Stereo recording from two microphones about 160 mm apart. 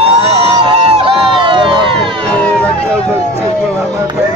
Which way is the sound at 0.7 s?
35° right (ahead or behind).